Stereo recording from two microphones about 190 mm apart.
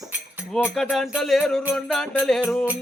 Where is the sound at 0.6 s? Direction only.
Centre (ahead or behind).